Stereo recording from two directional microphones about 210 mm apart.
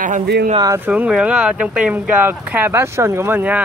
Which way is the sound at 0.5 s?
15° right (ahead or behind).